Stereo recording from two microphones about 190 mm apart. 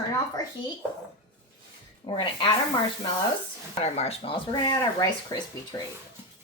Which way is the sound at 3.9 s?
30° left (ahead or behind).